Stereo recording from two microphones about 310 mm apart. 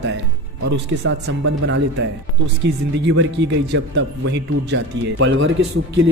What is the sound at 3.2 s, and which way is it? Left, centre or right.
Speech, right.